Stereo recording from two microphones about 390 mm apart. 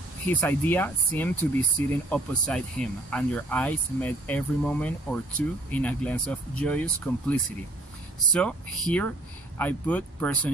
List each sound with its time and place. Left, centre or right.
0.3 s speech: centre